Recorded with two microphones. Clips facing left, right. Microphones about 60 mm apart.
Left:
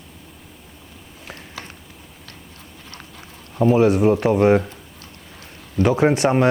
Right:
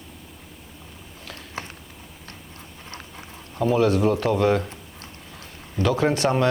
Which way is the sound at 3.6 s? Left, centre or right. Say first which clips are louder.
Left 4 dB; left.